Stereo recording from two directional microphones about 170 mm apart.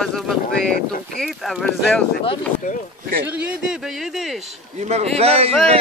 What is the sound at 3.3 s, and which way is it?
Speech, 10° right (ahead or behind).